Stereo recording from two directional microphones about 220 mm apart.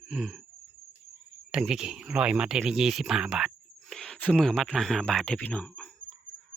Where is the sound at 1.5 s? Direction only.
5° right (ahead or behind).